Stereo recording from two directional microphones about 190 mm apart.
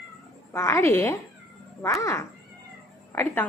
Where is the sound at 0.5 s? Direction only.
15° left (ahead or behind).